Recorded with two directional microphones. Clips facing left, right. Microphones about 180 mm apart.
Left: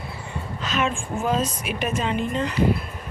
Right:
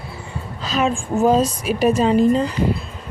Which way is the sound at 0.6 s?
35° right (ahead or behind).